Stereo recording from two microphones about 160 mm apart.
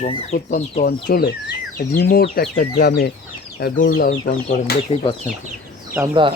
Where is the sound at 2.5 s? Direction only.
80° left.